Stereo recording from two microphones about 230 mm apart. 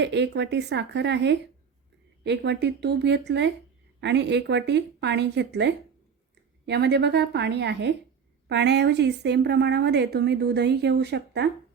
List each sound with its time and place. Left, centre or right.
0.0 s a woman's voice: right